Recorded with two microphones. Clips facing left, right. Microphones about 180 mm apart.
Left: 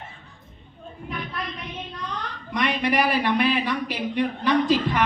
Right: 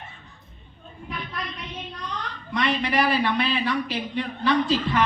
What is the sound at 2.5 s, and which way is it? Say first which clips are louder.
Speech: left 1 dB; 15° left (ahead or behind).